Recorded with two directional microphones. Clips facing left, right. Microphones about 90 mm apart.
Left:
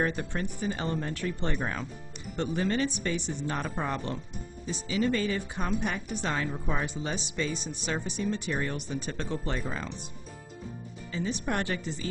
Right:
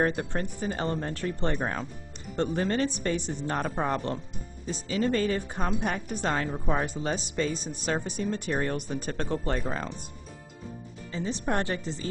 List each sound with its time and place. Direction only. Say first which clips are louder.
0.0 s speech: right 3 dB; 45° right (ahead or behind)
11.1 s speech: right 2 dB; 35° right (ahead or behind)